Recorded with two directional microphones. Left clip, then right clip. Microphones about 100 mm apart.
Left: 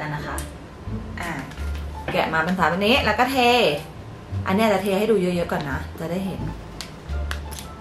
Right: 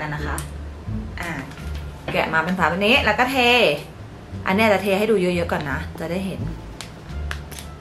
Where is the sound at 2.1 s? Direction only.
5° left (ahead or behind).